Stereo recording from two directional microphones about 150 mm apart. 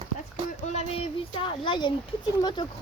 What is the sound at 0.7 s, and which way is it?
A child's voice, 45° left (ahead or behind).